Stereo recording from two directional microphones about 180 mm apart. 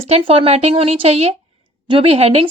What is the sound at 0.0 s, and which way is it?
Speech, 30° right (ahead or behind).